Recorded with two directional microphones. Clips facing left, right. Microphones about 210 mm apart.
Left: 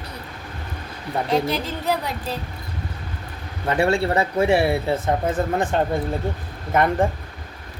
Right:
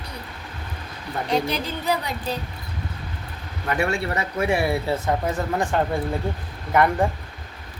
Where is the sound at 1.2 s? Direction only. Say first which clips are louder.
Left 1 dB; centre (ahead or behind).